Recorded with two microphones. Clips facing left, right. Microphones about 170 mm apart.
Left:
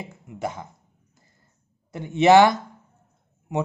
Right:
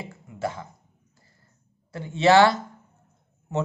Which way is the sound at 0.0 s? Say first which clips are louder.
Even; 20° left (ahead or behind).